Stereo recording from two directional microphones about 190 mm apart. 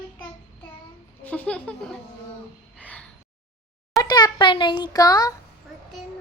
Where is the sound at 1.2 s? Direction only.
5° left (ahead or behind).